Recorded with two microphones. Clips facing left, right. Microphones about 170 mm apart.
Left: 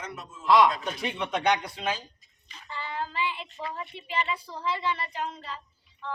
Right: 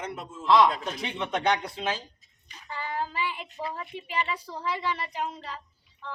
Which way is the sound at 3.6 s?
10° right (ahead or behind).